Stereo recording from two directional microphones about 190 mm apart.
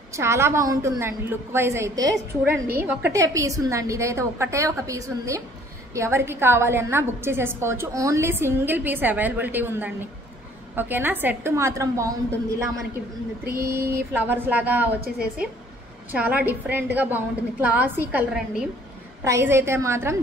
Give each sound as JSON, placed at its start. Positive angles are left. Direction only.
{"t": 0.1, "sound": "a woman's voice", "side_deg": -15}
{"t": 13.6, "sound": "a woman's voice", "side_deg": -15}
{"t": 16.1, "sound": "a woman's voice", "side_deg": -10}